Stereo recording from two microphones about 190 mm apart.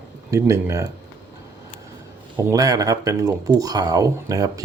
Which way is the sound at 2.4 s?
15° right (ahead or behind).